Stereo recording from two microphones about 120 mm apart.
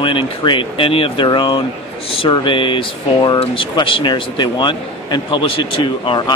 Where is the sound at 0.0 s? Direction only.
45° left (ahead or behind).